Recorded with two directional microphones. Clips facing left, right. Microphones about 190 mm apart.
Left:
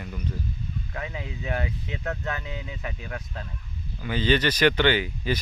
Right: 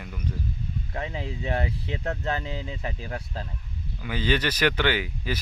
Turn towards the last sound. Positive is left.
turn(degrees=-5)  # may be behind; listen again after turning